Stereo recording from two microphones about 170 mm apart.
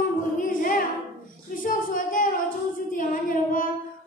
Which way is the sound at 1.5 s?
55° left (ahead or behind).